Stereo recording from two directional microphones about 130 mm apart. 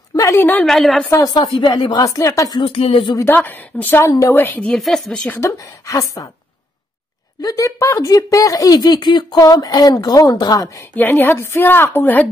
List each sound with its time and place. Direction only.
0.1 s a woman's voice: 25° left (ahead or behind)
0.7 s a woman's voice: 5° left (ahead or behind)
1.1 s speech: 30° left (ahead or behind)
2.6 s speech: 45° left (ahead or behind)
3.2 s a woman's voice: 15° left (ahead or behind)
5.4 s speech: 25° left (ahead or behind)
7.4 s speech: 25° left (ahead or behind)
11.0 s a woman's voice: 15° left (ahead or behind)